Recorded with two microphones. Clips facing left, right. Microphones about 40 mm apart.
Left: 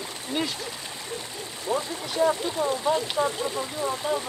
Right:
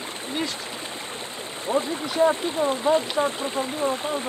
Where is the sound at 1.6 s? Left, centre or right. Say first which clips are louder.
Right 4 dB; right.